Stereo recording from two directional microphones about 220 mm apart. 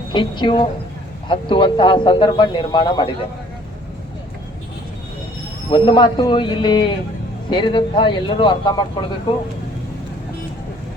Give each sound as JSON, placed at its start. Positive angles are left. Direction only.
{"t": 0.1, "sound": "speech", "side_deg": 20}
{"t": 5.7, "sound": "speech", "side_deg": 20}